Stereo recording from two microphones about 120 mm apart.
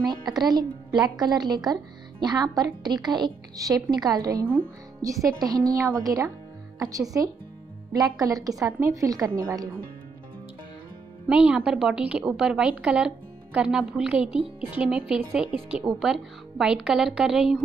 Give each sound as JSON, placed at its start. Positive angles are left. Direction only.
{"t": 0.4, "sound": "speech", "side_deg": -35}
{"t": 0.9, "sound": "a woman's voice", "side_deg": -10}
{"t": 1.2, "sound": "a woman's voice", "side_deg": -35}
{"t": 11.2, "sound": "a woman's voice", "side_deg": -10}